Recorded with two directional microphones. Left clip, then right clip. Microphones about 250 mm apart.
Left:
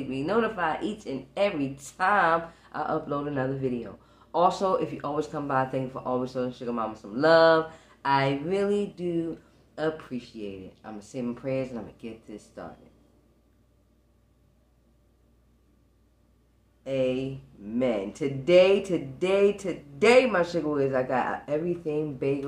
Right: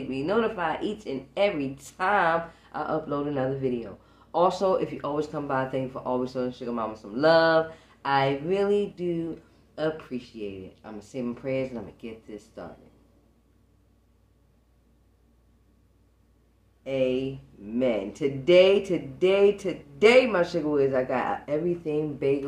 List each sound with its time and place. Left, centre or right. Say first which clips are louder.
0.1 s speech: right 1 dB; centre
16.8 s speech: right 1 dB; centre